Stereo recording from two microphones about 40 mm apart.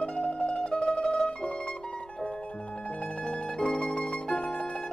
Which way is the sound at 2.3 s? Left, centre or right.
Left.